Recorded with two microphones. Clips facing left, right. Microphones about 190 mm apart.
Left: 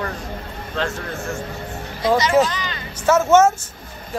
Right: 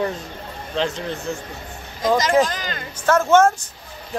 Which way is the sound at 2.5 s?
45° right (ahead or behind).